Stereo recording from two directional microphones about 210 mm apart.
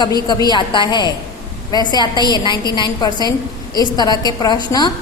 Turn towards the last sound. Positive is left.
turn(degrees=20)  # may be behind; listen again after turning